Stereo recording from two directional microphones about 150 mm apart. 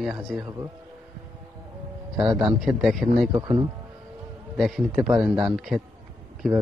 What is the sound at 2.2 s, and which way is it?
Speech, 30° right (ahead or behind).